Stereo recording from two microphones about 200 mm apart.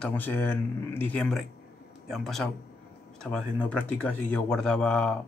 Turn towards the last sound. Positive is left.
turn(degrees=5)  # may be behind; listen again after turning